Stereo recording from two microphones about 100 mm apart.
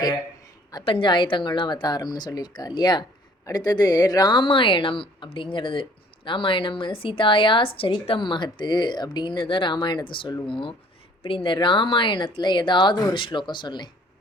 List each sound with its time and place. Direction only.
0.9 s speech: 55° left (ahead or behind)